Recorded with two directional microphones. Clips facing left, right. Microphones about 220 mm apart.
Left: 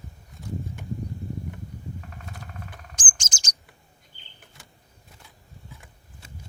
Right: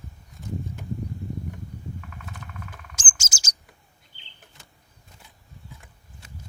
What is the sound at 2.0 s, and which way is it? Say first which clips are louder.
Vehicle: even; 35° left (ahead or behind).